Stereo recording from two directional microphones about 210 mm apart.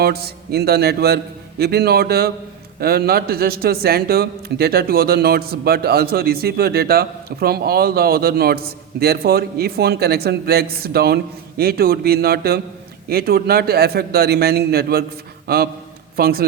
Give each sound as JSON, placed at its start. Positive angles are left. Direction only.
{"t": 0.0, "sound": "a man's voice", "side_deg": -50}